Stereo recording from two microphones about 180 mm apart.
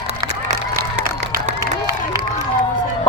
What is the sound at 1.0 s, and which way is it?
Crowd, 50° right (ahead or behind).